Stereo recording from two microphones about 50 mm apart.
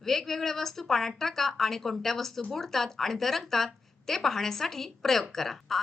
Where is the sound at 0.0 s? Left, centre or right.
Centre.